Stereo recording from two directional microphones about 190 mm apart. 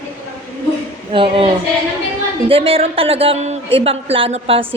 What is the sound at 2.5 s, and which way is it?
A woman's voice, 30° right (ahead or behind).